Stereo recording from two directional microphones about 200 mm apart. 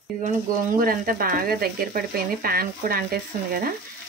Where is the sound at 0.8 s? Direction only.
45° right (ahead or behind).